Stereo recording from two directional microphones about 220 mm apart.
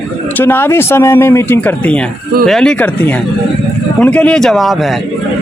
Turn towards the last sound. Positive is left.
turn(degrees=0)  # may be behind; listen again after turning